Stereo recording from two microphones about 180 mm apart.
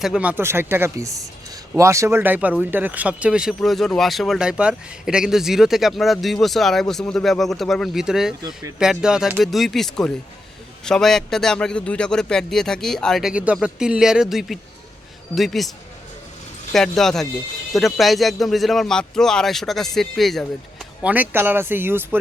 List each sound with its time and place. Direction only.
0.0 s a man's voice: 5° right (ahead or behind)
8.4 s speech: 20° right (ahead or behind)
8.8 s a man's voice: 5° right (ahead or behind)
16.7 s a man's voice: centre (ahead or behind)
21.1 s speech: 10° right (ahead or behind)